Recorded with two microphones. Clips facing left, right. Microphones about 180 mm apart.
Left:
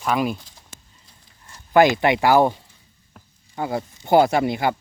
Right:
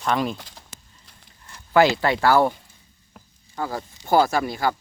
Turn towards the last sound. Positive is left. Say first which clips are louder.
# left 3 dB
turn(degrees=20)  # may be behind; listen again after turning